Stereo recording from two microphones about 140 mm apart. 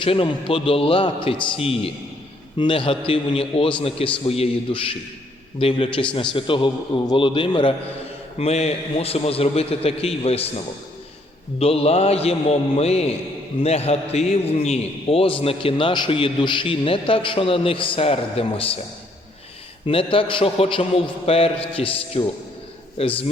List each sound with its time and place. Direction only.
0.0 s a man's voice: 40° left (ahead or behind)
8.4 s a man's voice: 50° left (ahead or behind)
11.6 s a man's voice: 45° left (ahead or behind)
19.8 s a man's voice: 40° left (ahead or behind)